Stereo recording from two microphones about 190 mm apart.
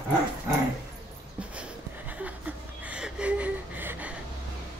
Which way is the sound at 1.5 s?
5° right (ahead or behind).